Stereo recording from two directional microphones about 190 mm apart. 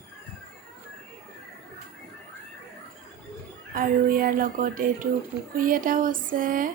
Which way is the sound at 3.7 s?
50° right (ahead or behind).